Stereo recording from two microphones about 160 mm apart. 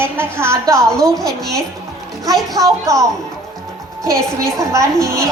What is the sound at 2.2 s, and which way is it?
A woman's voice, 25° right (ahead or behind).